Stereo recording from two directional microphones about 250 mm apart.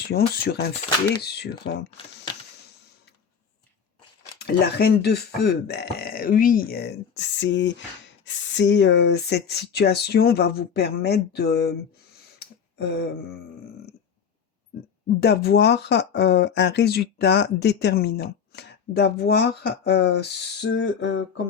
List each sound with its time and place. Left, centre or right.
0.1 s speech: left
4.4 s speech: left
12.7 s a sound: left
15.2 s speech: left